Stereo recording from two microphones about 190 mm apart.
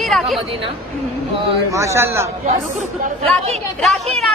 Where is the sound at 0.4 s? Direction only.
30° right (ahead or behind).